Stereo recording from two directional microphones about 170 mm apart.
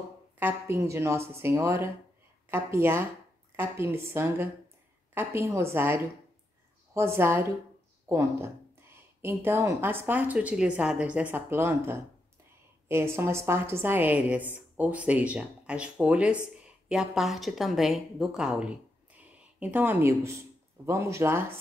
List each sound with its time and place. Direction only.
0.4 s a woman's voice: 15° right (ahead or behind)